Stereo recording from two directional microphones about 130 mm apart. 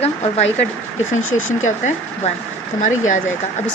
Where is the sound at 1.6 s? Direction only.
70° left (ahead or behind).